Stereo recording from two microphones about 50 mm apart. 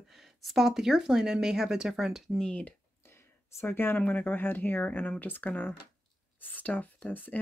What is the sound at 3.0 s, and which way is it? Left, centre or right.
Speech, left.